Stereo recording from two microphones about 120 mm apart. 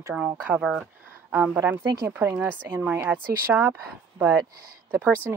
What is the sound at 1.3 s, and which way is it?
Speech, 20° right (ahead or behind).